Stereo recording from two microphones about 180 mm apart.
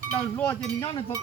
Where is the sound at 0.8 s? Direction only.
25° left (ahead or behind).